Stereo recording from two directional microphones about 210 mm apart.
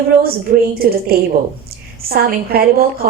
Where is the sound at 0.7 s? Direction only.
45° right (ahead or behind).